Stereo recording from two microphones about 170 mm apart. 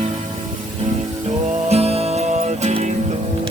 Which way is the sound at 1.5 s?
35° right (ahead or behind).